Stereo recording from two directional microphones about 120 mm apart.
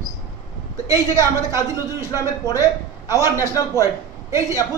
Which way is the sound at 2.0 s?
25° left (ahead or behind).